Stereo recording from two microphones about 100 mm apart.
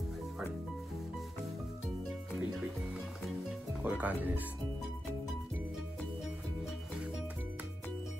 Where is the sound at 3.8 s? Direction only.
15° right (ahead or behind).